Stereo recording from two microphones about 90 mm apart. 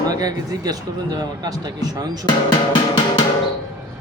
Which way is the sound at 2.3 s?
55° left (ahead or behind).